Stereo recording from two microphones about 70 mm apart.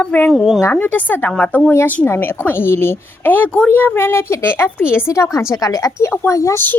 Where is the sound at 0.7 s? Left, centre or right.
Left.